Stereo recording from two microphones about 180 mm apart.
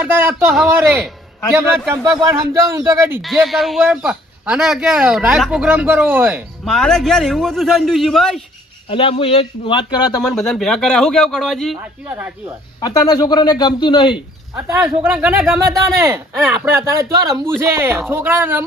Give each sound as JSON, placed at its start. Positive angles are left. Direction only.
{"t": 0.0, "sound": "speech", "side_deg": -10}
{"t": 2.1, "sound": "speech", "side_deg": -15}
{"t": 3.4, "sound": "speech", "side_deg": 0}
{"t": 6.7, "sound": "speech", "side_deg": 5}
{"t": 8.9, "sound": "a man's voice", "side_deg": 30}
{"t": 10.2, "sound": "speech", "side_deg": 5}
{"t": 11.8, "sound": "speech", "side_deg": -10}
{"t": 12.8, "sound": "a man's voice", "side_deg": 20}
{"t": 14.7, "sound": "speech", "side_deg": -10}